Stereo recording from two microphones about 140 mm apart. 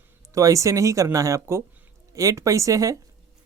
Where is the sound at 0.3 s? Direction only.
20° right (ahead or behind).